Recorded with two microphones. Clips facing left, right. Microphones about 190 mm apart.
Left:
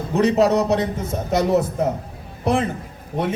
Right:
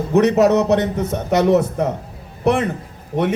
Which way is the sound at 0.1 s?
65° right (ahead or behind).